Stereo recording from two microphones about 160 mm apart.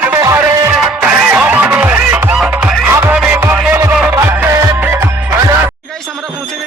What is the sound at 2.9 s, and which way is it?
Music, 15° right (ahead or behind).